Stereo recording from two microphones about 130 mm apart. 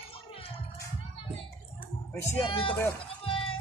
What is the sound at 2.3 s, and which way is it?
Speech, 45° left (ahead or behind).